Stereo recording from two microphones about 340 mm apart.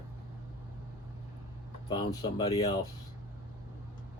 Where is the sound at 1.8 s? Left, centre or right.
Centre.